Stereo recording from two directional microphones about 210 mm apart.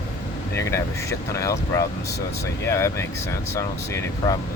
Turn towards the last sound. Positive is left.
turn(degrees=15)  # may be behind; listen again after turning